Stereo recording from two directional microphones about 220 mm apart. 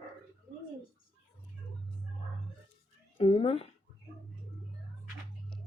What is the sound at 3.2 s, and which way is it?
Speech, 25° left (ahead or behind).